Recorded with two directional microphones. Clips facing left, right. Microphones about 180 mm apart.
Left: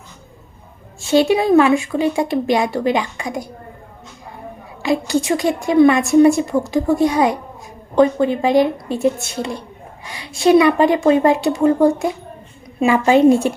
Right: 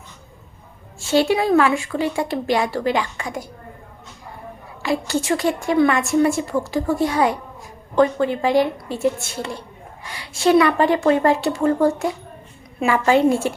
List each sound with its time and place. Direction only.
0.9 s a woman's voice: 15° left (ahead or behind)
4.8 s a woman's voice: 15° left (ahead or behind)